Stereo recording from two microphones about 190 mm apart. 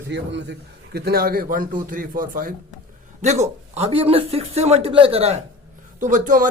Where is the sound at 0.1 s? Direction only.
65° right (ahead or behind).